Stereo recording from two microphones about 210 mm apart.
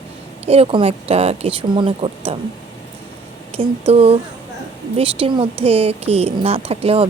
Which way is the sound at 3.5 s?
25° right (ahead or behind).